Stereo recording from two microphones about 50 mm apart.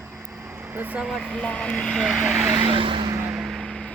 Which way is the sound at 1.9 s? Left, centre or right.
Centre.